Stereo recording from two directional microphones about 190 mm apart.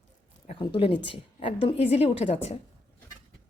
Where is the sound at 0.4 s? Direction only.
30° left (ahead or behind).